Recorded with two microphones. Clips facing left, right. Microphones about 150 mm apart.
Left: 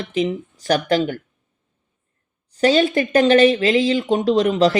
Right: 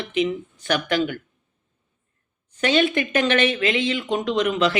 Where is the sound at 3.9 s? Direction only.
25° left (ahead or behind).